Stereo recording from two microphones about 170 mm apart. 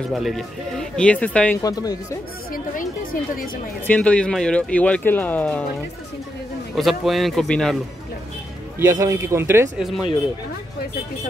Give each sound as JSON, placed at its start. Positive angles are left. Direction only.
{"t": 0.1, "sound": "speech", "side_deg": 0}
{"t": 1.6, "sound": "speech", "side_deg": 20}
{"t": 2.5, "sound": "speech", "side_deg": 55}
{"t": 3.8, "sound": "speech", "side_deg": 10}
{"t": 6.7, "sound": "speech", "side_deg": 0}
{"t": 8.7, "sound": "a man's voice", "side_deg": -15}
{"t": 9.8, "sound": "speech", "side_deg": 0}